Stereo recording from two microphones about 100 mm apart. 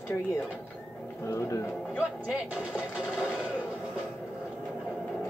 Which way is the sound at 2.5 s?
10° right (ahead or behind).